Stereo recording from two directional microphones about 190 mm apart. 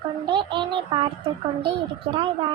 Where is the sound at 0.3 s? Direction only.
25° right (ahead or behind).